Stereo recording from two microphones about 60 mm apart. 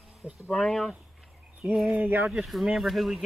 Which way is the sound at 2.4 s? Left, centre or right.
Centre.